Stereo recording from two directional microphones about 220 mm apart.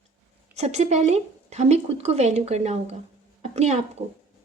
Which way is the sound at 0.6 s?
30° right (ahead or behind).